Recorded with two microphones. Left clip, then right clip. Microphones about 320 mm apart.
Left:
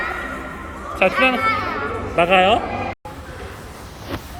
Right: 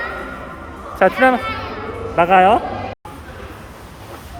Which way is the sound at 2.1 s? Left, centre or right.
Centre.